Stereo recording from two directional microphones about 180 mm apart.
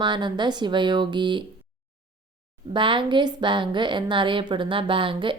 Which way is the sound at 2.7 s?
25° right (ahead or behind).